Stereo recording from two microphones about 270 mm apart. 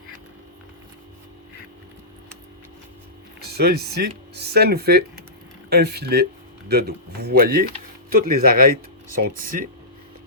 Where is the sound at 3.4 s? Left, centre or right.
Right.